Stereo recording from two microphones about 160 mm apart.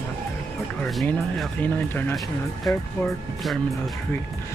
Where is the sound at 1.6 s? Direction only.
10° left (ahead or behind).